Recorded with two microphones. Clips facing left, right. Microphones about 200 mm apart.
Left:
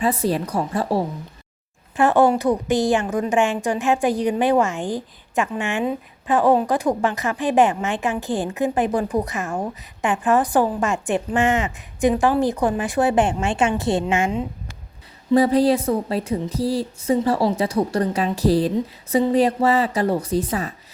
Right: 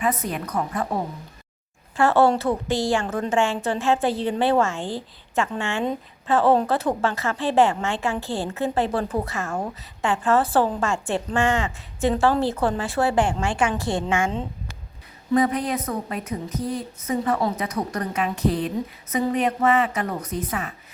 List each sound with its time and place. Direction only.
0.0 s a woman's voice: 30° left (ahead or behind)
2.0 s a woman's voice: 15° left (ahead or behind)
15.3 s a woman's voice: 30° left (ahead or behind)